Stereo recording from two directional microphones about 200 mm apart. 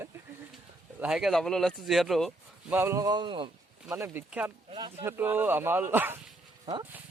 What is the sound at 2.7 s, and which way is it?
Speech, 15° right (ahead or behind).